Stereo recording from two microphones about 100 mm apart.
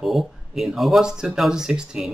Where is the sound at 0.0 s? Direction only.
Centre (ahead or behind).